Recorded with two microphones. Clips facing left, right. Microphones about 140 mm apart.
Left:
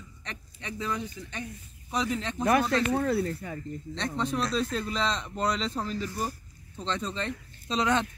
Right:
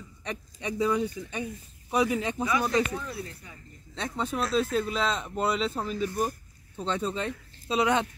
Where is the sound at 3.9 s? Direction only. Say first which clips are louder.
Even; 5° right (ahead or behind).